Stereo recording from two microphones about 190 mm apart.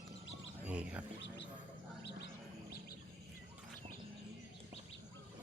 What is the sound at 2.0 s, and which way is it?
Bird, 60° left (ahead or behind).